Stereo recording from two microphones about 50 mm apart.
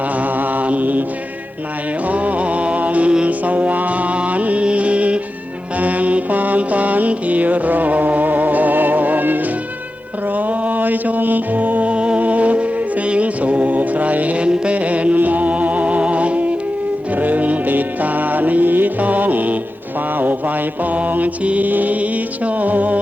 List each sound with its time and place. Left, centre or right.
0.2 s mantra: right
2.0 s music: right
5.8 s mantra: right
11.9 s music: right
13.1 s mantra: right
17.2 s music: right
20.9 s mantra: right
22.4 s music: right